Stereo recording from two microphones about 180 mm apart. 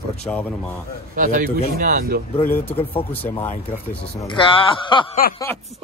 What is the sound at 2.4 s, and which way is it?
Speech, 10° left (ahead or behind).